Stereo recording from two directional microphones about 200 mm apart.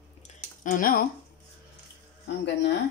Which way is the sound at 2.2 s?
60° left (ahead or behind).